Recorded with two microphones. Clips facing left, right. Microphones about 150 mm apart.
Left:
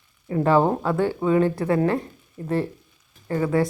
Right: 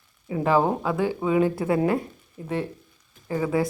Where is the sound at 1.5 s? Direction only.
20° right (ahead or behind).